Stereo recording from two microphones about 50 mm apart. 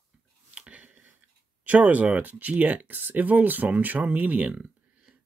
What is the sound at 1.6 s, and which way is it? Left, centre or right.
Speech, right.